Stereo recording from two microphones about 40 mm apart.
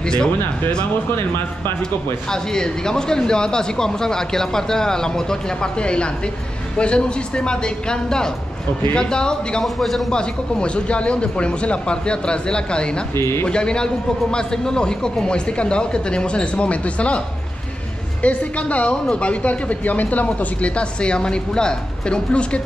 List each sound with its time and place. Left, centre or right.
0.0 s speech: centre
1.1 s speech: left
2.3 s a man's voice: centre
9.8 s speech: centre
10.1 s a man's voice: left
13.1 s speech: left
13.5 s a man's voice: left
18.2 s speech: left